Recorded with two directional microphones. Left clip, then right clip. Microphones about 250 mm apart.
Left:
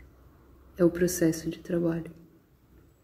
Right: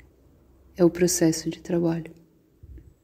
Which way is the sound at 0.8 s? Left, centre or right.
Right.